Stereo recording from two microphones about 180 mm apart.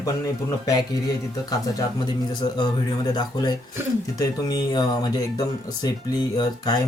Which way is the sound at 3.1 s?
25° left (ahead or behind).